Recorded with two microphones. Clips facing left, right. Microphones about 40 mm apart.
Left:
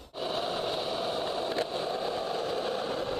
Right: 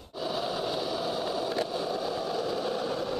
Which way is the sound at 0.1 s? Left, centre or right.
Left.